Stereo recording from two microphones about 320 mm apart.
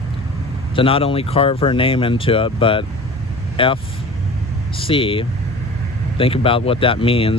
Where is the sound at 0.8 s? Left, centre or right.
Centre.